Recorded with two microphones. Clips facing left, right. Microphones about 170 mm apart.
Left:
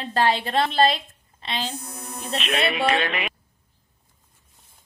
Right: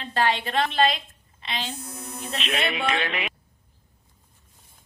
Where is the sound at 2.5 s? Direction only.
40° left (ahead or behind).